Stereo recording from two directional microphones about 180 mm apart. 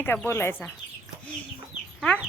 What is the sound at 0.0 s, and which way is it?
Speech, 10° left (ahead or behind).